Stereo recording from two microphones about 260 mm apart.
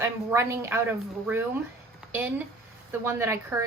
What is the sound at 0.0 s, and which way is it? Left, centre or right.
A woman's voice, centre.